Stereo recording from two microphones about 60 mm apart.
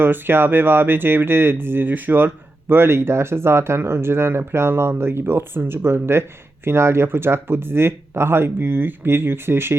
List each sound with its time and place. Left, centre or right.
0.0 s speech: right